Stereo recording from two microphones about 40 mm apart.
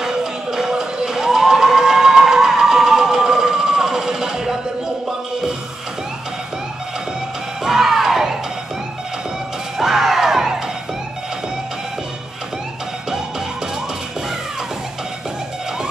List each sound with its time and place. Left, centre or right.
0.0 s a sound: centre
7.6 s music: centre
9.8 s music: centre